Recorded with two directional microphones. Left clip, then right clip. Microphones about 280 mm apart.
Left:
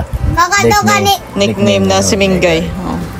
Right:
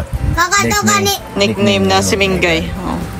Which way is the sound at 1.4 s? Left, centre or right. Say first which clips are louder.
Left 2 dB; centre.